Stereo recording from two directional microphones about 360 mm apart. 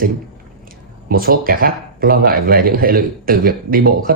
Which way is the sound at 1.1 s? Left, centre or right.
Right.